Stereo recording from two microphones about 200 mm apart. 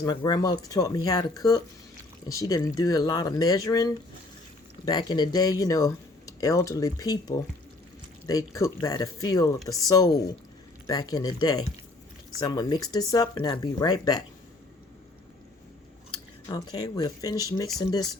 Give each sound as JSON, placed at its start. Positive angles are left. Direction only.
{"t": 0.0, "sound": "speech", "side_deg": 20}
{"t": 4.9, "sound": "speech", "side_deg": 20}
{"t": 16.1, "sound": "speech", "side_deg": 20}